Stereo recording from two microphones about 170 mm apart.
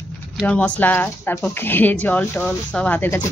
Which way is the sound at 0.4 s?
5° left (ahead or behind).